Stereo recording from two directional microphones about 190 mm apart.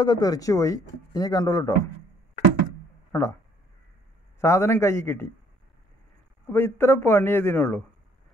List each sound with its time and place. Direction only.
0.0 s a man's voice: 20° left (ahead or behind)
3.1 s speech: 15° left (ahead or behind)
4.4 s a man's voice: 15° left (ahead or behind)
6.5 s a man's voice: 10° left (ahead or behind)